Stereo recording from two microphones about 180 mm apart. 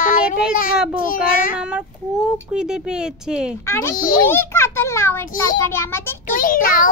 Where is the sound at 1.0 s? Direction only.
50° left (ahead or behind).